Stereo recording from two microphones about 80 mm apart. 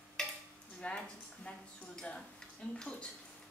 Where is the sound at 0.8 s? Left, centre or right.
Centre.